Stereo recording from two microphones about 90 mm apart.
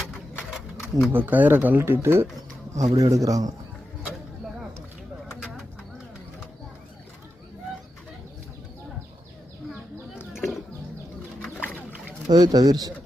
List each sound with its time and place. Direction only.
0.5 s a sound: centre (ahead or behind)
1.1 s speech: 20° right (ahead or behind)
2.7 s speech: 40° right (ahead or behind)
11.6 s boat: 20° left (ahead or behind)
12.3 s speech: 50° right (ahead or behind)